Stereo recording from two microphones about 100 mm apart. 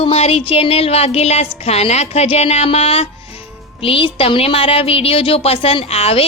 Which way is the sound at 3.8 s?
60° left (ahead or behind).